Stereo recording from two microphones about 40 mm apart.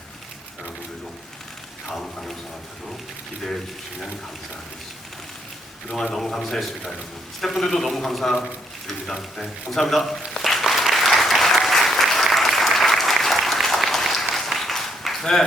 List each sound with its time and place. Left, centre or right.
1.9 s a man's voice: centre
5.9 s a man's voice: centre
10.9 s applause: centre